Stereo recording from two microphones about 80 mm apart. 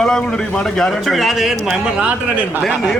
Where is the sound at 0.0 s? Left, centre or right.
Centre.